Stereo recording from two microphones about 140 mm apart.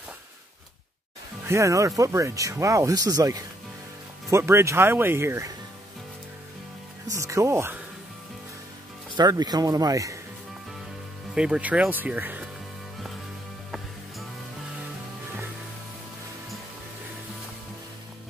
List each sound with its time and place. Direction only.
1.5 s speech: 20° right (ahead or behind)
7.1 s speech: 20° right (ahead or behind)
9.1 s speech: 30° right (ahead or behind)
11.3 s speech: 5° right (ahead or behind)